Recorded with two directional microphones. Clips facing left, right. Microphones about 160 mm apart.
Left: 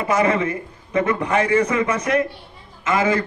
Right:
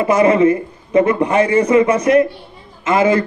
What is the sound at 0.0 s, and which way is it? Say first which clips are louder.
A man's voice: right 7 dB; 25° right (ahead or behind).